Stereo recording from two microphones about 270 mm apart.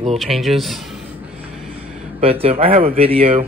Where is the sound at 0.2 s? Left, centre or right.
Centre.